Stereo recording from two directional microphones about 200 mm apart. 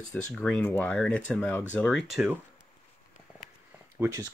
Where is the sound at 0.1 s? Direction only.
5° left (ahead or behind).